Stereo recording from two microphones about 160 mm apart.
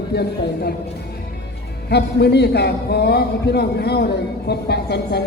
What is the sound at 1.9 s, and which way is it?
A man's voice, 90° left.